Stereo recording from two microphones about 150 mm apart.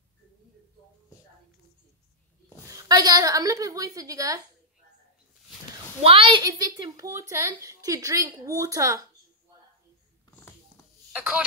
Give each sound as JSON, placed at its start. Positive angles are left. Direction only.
{"t": 2.7, "sound": "a woman's voice", "side_deg": -25}
{"t": 6.0, "sound": "a woman's voice", "side_deg": -40}
{"t": 11.1, "sound": "speech", "side_deg": -10}